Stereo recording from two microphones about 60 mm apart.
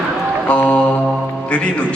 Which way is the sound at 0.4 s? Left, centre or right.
Left.